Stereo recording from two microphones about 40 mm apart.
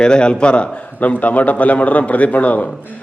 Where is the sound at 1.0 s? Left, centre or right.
Left.